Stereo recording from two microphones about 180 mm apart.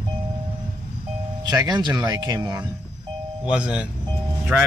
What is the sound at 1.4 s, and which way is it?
Speech, 20° right (ahead or behind).